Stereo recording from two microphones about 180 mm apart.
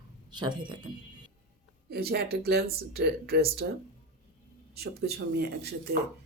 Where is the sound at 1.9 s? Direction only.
60° right (ahead or behind).